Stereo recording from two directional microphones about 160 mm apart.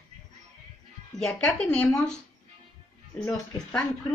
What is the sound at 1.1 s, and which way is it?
Speech, 5° left (ahead or behind).